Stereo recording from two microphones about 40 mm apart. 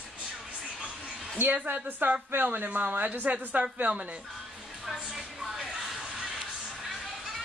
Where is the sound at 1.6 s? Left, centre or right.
Right.